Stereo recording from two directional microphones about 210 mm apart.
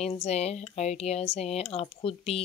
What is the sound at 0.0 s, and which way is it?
Speech, 30° left (ahead or behind).